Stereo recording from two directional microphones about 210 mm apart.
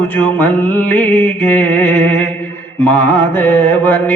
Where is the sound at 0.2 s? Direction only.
10° left (ahead or behind).